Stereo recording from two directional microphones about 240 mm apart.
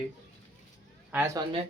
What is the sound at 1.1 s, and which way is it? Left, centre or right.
Speech, centre.